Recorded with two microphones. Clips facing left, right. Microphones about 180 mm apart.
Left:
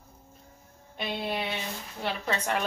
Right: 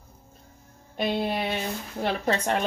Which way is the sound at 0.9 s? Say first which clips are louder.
Right 6 dB; 40° right (ahead or behind).